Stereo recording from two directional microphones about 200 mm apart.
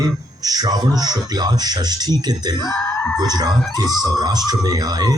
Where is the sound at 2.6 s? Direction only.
15° left (ahead or behind).